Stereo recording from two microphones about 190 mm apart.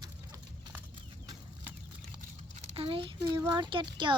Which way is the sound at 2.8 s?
30° right (ahead or behind).